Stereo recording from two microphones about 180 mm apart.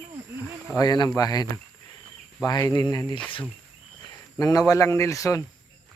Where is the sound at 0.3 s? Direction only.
10° right (ahead or behind).